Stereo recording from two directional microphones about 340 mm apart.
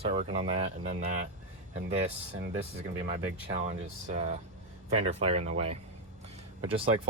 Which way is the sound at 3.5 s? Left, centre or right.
Centre.